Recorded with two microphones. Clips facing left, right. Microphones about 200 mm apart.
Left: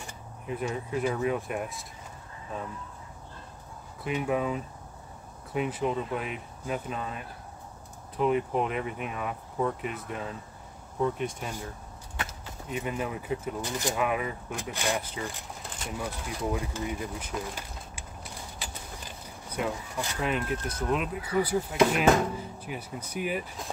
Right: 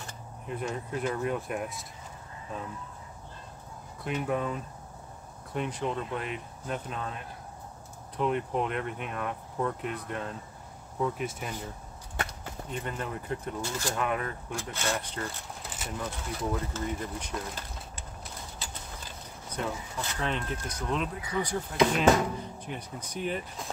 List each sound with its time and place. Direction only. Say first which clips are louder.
0.0 s speech: left 1 dB; 5° left (ahead or behind)
4.0 s speech: left 2 dB; 5° left (ahead or behind)
8.2 s speech: left 3 dB; 5° left (ahead or behind)
12.3 s speech: left 1 dB; 5° left (ahead or behind)
13.6 s speech: left 2 dB; 15° left (ahead or behind)
13.9 s speech: left 2 dB; 5° left (ahead or behind)
16.5 s speech: even; 10° left (ahead or behind)
18.6 s mechanisms: left 1 dB; 10° left (ahead or behind)
20.9 s speech: left 3 dB; 5° left (ahead or behind)